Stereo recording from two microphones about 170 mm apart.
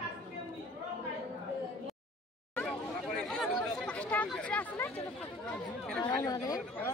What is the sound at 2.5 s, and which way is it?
Chatter, 5° left (ahead or behind).